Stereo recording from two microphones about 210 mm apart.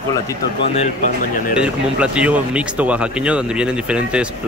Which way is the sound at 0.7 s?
35° left (ahead or behind).